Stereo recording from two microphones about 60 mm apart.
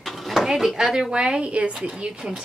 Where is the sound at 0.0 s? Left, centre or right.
Centre.